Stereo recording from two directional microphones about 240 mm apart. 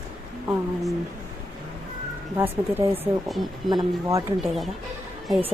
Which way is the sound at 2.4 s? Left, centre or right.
Centre.